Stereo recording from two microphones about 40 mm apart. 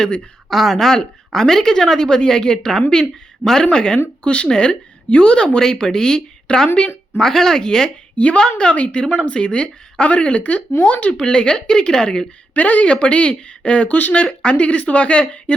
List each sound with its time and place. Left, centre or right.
0.5 s a woman's voice: centre; by 4.4 s left
4.4 s a woman's voice: centre
8.1 s a woman's voice: left
8.4 s a woman's voice: left
11.1 s a woman's voice: left
12.5 s speech: left
12.9 s a woman's voice: left